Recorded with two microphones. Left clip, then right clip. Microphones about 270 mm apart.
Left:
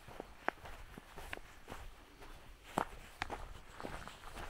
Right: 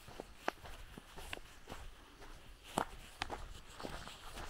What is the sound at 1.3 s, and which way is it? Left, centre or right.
Walk, centre.